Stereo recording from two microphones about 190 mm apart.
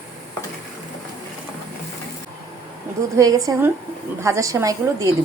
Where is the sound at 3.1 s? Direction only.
20° right (ahead or behind).